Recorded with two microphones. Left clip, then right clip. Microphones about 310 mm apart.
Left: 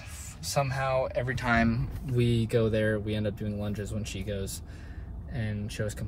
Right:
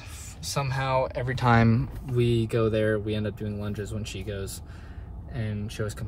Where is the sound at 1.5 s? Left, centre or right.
Right.